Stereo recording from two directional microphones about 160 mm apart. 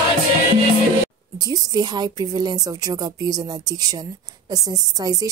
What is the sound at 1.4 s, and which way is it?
Speech, 25° right (ahead or behind).